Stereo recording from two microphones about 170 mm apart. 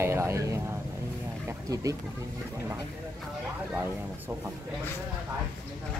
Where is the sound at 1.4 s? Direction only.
20° right (ahead or behind).